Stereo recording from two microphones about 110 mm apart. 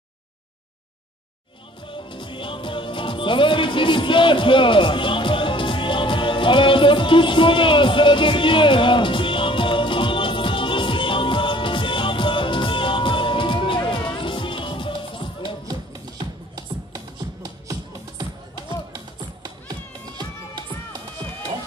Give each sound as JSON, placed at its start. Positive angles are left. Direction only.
{"t": 1.9, "sound": "music", "side_deg": 50}
{"t": 16.5, "sound": "music", "side_deg": -40}